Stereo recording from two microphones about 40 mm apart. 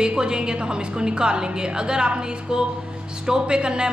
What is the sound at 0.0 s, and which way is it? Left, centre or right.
A woman's voice, right.